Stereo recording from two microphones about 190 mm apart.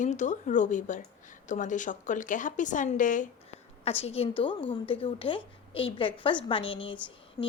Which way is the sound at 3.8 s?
30° left (ahead or behind).